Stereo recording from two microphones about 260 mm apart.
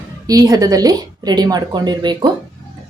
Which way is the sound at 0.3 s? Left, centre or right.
Centre.